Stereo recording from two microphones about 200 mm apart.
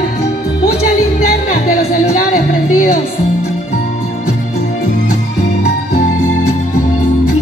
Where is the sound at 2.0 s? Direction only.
40° left (ahead or behind).